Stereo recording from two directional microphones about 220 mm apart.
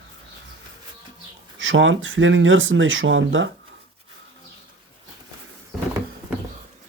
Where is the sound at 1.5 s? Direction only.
60° right (ahead or behind).